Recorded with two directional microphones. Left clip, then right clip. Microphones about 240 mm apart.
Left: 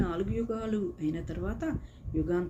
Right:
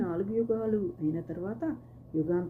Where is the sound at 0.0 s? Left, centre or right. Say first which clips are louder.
Right 2 dB; centre.